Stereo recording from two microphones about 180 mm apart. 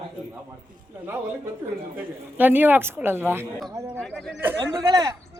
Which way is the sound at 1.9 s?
10° right (ahead or behind).